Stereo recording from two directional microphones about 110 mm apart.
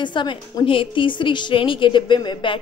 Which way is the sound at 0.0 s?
45° left (ahead or behind).